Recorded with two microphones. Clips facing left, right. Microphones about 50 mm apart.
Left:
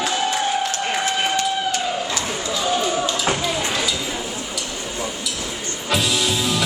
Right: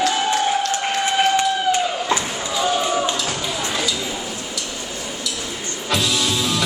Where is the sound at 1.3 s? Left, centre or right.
Right.